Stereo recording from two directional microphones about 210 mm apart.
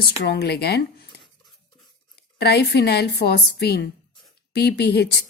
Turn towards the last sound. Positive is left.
turn(degrees=50)  # may be behind; listen again after turning